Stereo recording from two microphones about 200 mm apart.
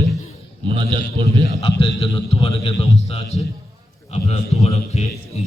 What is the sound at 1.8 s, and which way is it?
A man's voice, 25° left (ahead or behind).